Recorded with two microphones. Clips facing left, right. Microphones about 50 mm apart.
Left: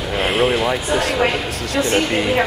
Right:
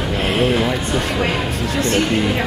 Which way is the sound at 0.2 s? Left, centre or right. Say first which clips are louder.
Left 1 dB; centre.